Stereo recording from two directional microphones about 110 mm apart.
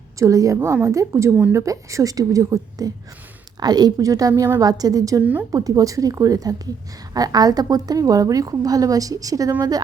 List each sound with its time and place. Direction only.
0.2 s a woman's voice: 30° right (ahead or behind)
5.2 s a woman's voice: 10° right (ahead or behind)
5.5 s a woman's voice: 35° right (ahead or behind)